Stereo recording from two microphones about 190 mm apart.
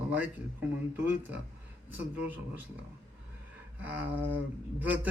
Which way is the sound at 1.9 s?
10° right (ahead or behind).